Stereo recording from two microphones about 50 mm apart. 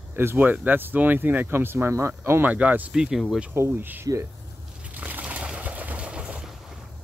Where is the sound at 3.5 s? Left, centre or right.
Right.